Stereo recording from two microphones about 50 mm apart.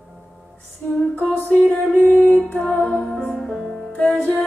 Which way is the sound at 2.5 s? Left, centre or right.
Left.